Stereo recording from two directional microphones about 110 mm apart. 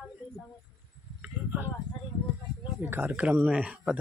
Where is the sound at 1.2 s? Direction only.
20° right (ahead or behind).